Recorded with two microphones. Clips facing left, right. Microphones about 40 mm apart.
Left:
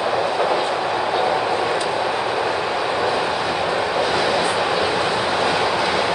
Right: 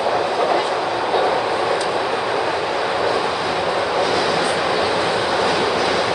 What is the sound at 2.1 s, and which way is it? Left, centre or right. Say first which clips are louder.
Vehicle: right 1 dB; centre.